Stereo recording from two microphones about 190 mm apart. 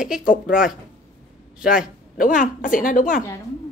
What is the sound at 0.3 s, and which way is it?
A woman's voice, 5° right (ahead or behind).